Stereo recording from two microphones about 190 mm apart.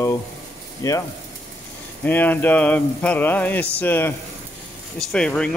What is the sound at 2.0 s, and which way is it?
Speech, 10° left (ahead or behind).